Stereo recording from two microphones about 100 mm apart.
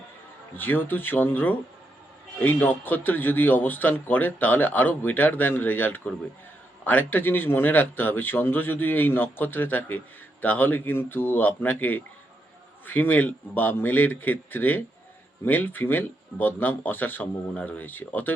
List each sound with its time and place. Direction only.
0.5 s a man's voice: 20° left (ahead or behind)